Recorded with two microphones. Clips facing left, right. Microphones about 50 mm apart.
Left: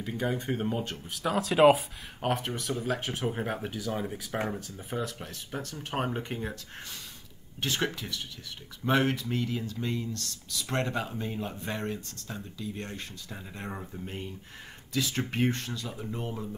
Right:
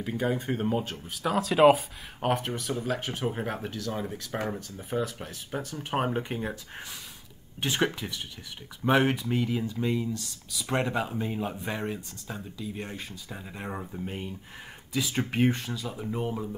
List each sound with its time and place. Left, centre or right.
0.0 s speech: centre
7.6 s speech: centre